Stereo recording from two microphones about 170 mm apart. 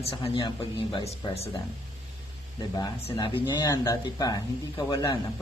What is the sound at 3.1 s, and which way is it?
A man's voice, 25° left (ahead or behind).